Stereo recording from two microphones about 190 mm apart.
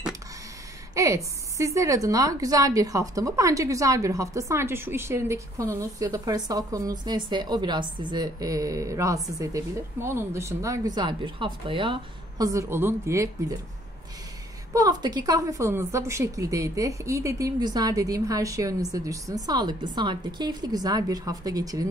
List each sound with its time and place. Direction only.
0.9 s a woman's voice: 15° right (ahead or behind)
14.7 s speech: 20° right (ahead or behind)